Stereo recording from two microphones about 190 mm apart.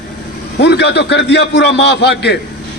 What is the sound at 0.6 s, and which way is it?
A man's voice, 65° left (ahead or behind).